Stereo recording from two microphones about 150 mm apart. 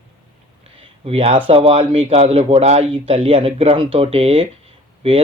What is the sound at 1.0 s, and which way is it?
A man's voice, 40° right (ahead or behind).